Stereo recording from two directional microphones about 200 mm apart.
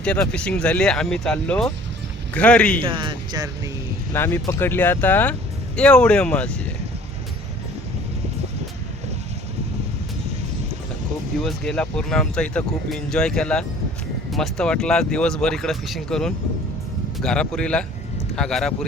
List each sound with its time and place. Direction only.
0.0 s speech: 5° left (ahead or behind)
2.8 s speech: 25° right (ahead or behind)
4.1 s speech: 10° left (ahead or behind)
11.4 s speech: 5° left (ahead or behind)